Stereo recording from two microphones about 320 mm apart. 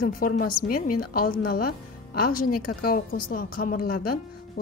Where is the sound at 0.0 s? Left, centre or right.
Left.